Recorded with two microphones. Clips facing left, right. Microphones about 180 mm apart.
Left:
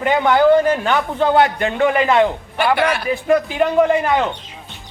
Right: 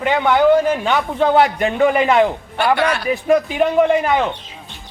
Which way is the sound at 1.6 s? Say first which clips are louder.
Right 1 dB; 15° right (ahead or behind).